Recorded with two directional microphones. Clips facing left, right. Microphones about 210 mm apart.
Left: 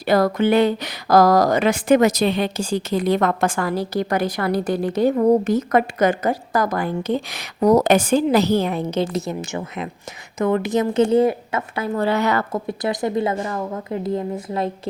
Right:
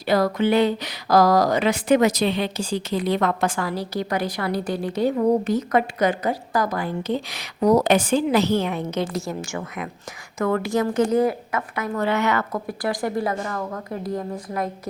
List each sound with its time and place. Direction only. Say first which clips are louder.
0.0 s a woman's voice: left 3 dB; 50° left (ahead or behind); by 14.7 s 25° left (ahead or behind)